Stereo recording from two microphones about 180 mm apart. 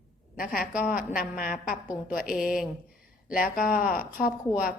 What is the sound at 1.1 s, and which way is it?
A woman's voice, 55° left (ahead or behind).